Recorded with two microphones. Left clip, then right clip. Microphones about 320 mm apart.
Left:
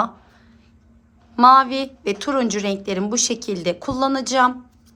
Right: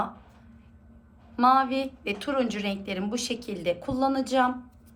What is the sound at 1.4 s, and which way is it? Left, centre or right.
A woman's voice, left.